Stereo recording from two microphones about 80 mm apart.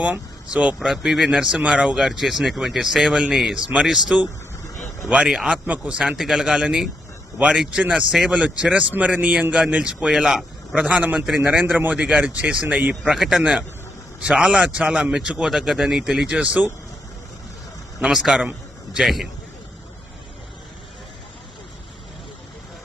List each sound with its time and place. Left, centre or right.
0.0 s speech: centre
0.9 s a man's voice: centre
3.1 s a man's voice: centre
3.3 s a man's voice: centre
4.1 s a man's voice: centre
10.8 s a man's voice: centre
12.9 s a man's voice: centre
13.4 s a man's voice: centre
18.0 s a man's voice: centre